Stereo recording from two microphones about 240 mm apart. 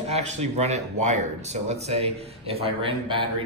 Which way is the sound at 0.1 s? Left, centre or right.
Right.